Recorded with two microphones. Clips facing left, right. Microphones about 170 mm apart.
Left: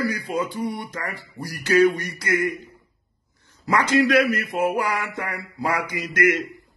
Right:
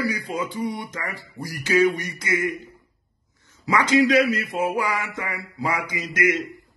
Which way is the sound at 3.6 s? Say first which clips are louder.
Right 1 dB; 50° left (ahead or behind).